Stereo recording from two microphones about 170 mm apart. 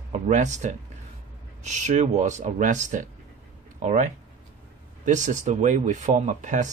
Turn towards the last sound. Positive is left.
turn(degrees=-45)  # may be behind; listen again after turning